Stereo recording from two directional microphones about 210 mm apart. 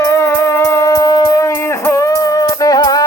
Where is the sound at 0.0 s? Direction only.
15° left (ahead or behind).